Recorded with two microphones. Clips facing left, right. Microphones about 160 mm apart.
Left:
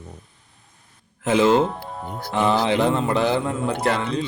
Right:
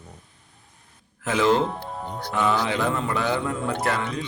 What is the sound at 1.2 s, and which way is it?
Speech, 25° left (ahead or behind).